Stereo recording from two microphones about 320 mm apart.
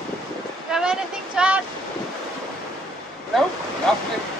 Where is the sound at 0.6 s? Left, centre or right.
Centre.